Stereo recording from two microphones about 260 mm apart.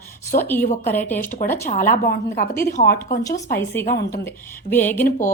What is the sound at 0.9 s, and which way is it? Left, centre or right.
Speech, centre.